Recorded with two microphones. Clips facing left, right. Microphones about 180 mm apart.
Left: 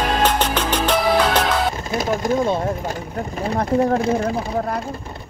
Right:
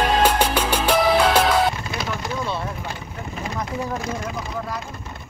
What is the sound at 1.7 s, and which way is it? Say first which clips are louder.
Vehicle: left 7 dB; 45° left (ahead or behind).